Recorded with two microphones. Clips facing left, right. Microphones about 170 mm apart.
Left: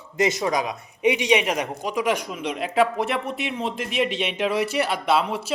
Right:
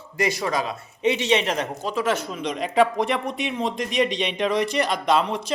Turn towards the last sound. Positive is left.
turn(degrees=5)  # may be behind; listen again after turning